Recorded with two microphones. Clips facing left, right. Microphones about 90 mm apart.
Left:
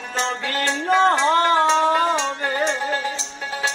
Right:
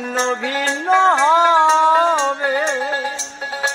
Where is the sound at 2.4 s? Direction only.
20° right (ahead or behind).